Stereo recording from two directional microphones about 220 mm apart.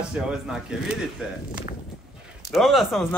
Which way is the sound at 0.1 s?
5° right (ahead or behind).